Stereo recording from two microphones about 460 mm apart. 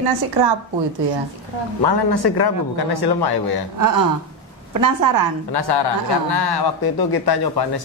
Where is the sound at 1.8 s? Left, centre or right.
Left.